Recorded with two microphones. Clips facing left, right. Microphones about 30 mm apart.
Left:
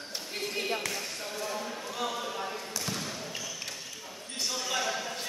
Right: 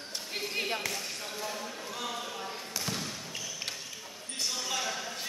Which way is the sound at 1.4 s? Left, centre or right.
Centre.